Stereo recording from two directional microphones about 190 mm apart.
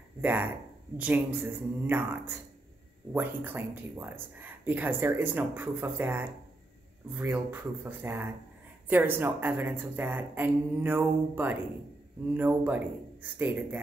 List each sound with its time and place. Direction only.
0.2 s speech: 10° right (ahead or behind)